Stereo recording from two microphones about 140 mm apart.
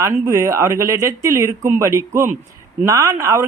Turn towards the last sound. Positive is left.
turn(degrees=-25)  # may be behind; listen again after turning